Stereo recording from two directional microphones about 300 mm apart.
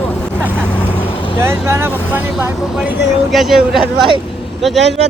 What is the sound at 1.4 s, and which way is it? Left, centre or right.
Speech, centre.